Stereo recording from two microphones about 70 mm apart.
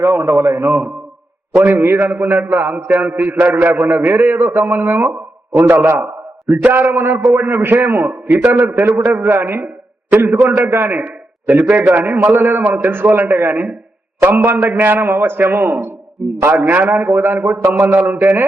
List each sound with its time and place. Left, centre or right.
0.0 s a man's voice: right
1.5 s a man's voice: right
16.6 s a man's voice: right